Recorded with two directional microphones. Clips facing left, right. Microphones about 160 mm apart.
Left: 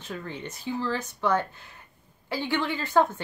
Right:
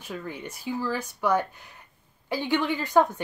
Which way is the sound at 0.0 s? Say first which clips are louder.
Right 1 dB; 10° right (ahead or behind).